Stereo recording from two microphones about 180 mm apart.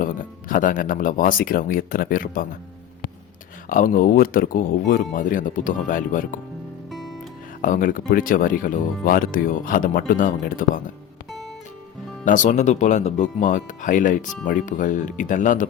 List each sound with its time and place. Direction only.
0.0 s speech: 50° left (ahead or behind)
3.7 s speech: 50° left (ahead or behind)
6.9 s music: centre (ahead or behind)
7.6 s speech: 50° left (ahead or behind)
12.2 s speech: 45° left (ahead or behind)